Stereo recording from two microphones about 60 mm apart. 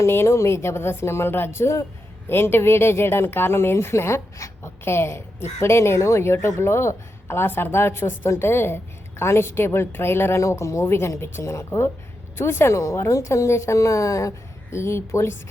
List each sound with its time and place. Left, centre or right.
0.0 s speech: left
1.5 s speech: left
2.3 s speech: left
12.7 s a woman's voice: left